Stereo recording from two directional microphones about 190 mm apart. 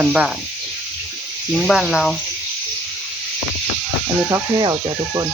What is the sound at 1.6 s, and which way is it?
Speech, centre (ahead or behind).